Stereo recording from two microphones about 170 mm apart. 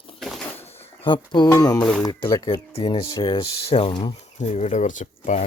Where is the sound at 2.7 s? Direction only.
35° left (ahead or behind).